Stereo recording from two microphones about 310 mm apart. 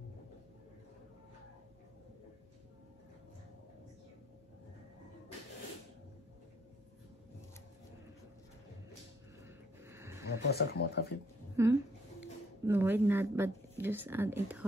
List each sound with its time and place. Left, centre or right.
9.8 s a sound: centre
10.5 s speech: left
11.5 s speech: centre